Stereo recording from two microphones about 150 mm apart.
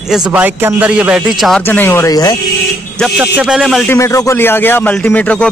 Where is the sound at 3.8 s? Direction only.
15° left (ahead or behind).